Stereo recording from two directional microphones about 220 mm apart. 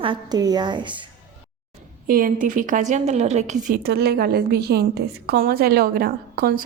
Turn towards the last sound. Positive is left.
turn(degrees=-40)  # may be behind; listen again after turning